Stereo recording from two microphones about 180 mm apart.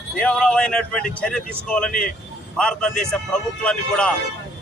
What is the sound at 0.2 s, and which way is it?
A man's voice, 5° left (ahead or behind).